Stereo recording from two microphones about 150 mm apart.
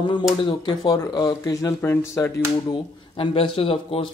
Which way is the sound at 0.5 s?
30° left (ahead or behind).